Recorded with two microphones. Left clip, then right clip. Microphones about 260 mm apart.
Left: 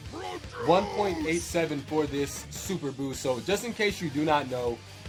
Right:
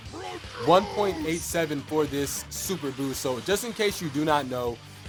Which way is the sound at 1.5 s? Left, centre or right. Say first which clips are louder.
Right 1 dB; right.